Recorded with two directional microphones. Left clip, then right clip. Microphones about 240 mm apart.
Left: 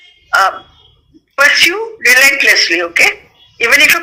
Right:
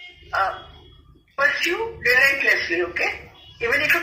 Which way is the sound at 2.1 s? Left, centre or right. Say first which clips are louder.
Left 9 dB; left.